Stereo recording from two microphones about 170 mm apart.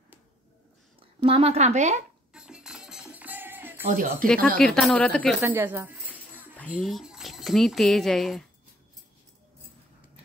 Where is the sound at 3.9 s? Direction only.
50° right (ahead or behind).